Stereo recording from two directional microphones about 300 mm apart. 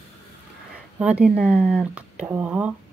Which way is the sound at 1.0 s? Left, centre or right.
Centre.